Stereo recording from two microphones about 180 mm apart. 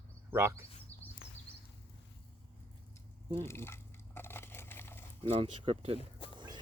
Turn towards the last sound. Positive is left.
turn(degrees=-25)  # may be behind; listen again after turning